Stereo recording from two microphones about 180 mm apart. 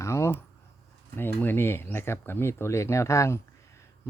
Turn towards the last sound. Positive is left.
turn(degrees=15)  # may be behind; listen again after turning